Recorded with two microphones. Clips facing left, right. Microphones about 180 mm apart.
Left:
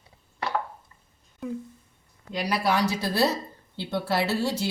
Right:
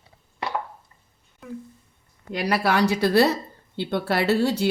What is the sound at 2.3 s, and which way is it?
Speech, 65° right (ahead or behind).